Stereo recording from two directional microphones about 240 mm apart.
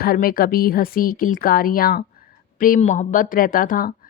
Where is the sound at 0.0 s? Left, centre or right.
Left.